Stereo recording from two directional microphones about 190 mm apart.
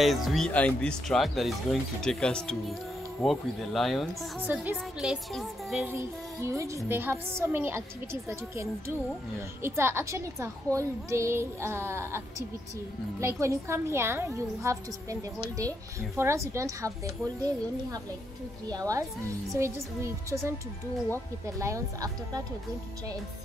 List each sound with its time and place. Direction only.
0.0 s speech: centre (ahead or behind)
5.9 s a woman's voice: 15° right (ahead or behind)
21.5 s a woman's voice: 15° right (ahead or behind)